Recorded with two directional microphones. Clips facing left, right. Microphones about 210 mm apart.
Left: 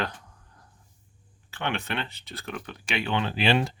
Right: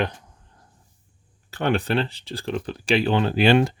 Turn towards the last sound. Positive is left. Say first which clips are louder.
# right 7 dB
turn(degrees=-45)  # may be behind; listen again after turning